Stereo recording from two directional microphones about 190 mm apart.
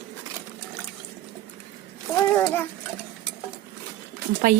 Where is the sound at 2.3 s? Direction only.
10° left (ahead or behind).